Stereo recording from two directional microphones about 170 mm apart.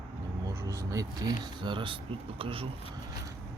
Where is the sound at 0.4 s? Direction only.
15° right (ahead or behind); by 2.6 s 30° right (ahead or behind).